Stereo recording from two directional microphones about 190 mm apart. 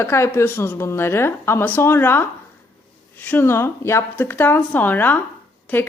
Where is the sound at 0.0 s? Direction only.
15° left (ahead or behind).